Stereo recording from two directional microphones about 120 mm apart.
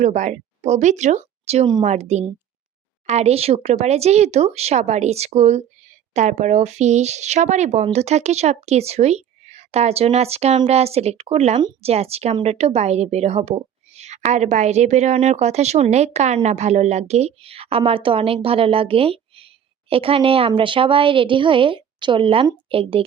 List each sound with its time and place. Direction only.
0.0 s a woman's voice: 85° right; by 23.0 s 50° right (ahead or behind)